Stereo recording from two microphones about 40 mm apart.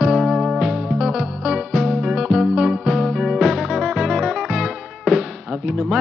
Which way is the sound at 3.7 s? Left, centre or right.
Centre.